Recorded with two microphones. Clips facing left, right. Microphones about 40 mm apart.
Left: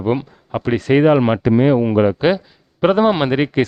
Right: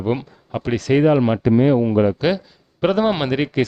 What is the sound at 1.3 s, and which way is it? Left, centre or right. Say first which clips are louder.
Speech: left 1 dB; left.